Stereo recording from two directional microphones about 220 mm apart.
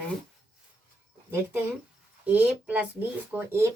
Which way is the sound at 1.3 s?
10° right (ahead or behind).